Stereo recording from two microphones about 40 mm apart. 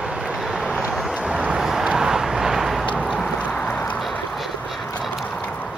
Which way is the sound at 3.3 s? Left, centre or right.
Left.